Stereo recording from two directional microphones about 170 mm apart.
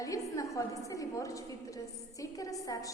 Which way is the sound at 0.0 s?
20° left (ahead or behind).